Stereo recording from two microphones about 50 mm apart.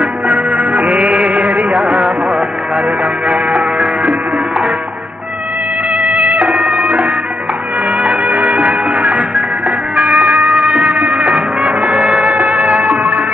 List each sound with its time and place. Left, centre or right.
0.0 s music: right
3.3 s music: right
5.9 s cat: right
8.0 s music: right